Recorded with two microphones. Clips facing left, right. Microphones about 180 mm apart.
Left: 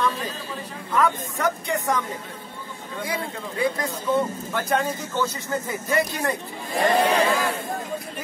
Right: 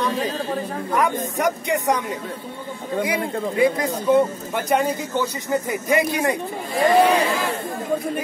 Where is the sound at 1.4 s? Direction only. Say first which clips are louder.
Right 4 dB; 15° right (ahead or behind).